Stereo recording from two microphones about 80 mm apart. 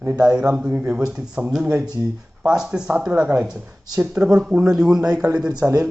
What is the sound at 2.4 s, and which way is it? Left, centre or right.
Speech, centre.